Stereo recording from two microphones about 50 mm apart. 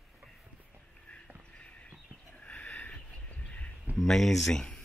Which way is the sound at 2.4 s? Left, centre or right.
Left.